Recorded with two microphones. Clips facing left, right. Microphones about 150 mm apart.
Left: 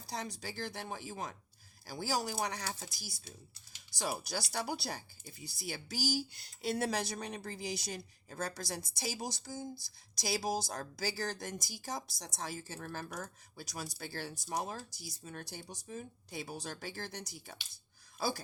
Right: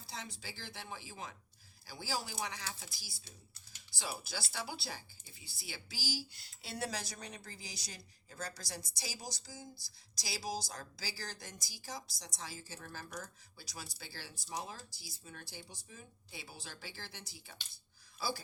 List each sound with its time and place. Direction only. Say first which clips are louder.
0.1 s speech: left 7 dB; 40° left (ahead or behind)
9.7 s speech: left 7 dB; 20° left (ahead or behind)
10.2 s speech: left 6 dB; 50° left (ahead or behind)